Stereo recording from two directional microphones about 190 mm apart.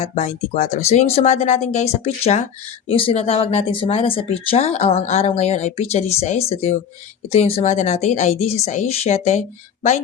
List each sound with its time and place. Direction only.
0.0 s speech: 35° left (ahead or behind)